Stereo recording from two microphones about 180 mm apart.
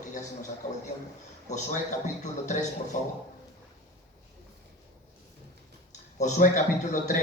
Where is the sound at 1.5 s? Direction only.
45° left (ahead or behind).